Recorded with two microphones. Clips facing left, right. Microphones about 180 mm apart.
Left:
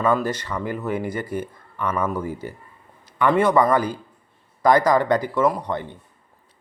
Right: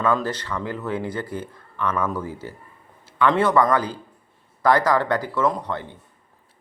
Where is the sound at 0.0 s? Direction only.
10° left (ahead or behind).